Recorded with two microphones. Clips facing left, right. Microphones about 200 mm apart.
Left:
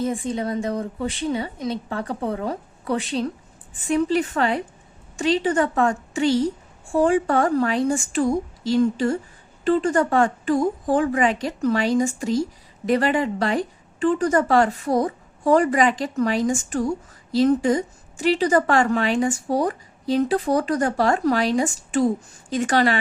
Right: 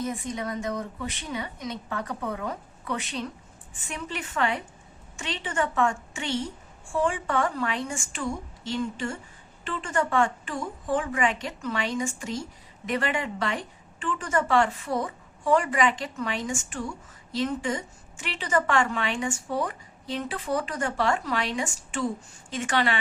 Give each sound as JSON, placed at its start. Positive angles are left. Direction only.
{"t": 0.0, "sound": "a woman's voice", "side_deg": 30}